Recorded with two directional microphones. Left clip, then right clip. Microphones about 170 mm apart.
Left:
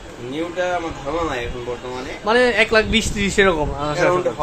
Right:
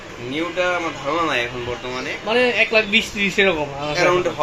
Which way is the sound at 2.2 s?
30° left (ahead or behind).